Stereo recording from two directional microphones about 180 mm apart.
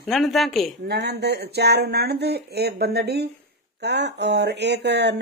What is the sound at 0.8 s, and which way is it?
Speech, 65° right (ahead or behind).